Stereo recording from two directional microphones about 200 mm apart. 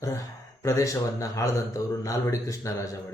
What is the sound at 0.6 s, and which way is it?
Speech, 15° left (ahead or behind).